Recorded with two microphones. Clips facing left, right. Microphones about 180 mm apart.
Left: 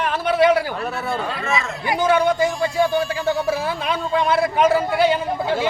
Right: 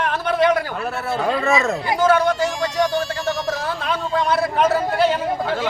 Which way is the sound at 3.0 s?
10° left (ahead or behind).